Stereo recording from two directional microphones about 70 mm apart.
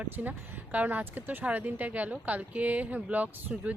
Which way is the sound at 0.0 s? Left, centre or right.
Right.